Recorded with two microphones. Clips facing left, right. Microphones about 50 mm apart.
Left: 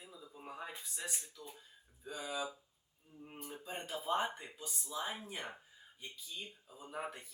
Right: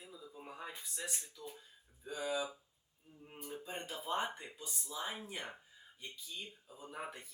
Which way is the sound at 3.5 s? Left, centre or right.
Centre.